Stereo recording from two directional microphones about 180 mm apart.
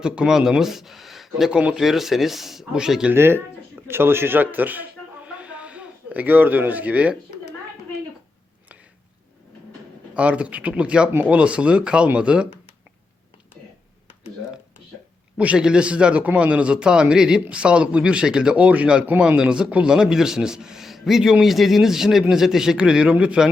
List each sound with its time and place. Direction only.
0.0 s a man's voice: 5° right (ahead or behind)
10.2 s speech: 5° right (ahead or behind)
15.4 s a man's voice: 5° right (ahead or behind)